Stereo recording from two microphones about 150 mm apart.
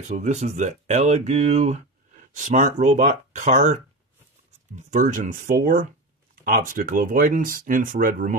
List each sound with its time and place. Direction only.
0.1 s speech: 50° right (ahead or behind); by 8.4 s 65° right (ahead or behind)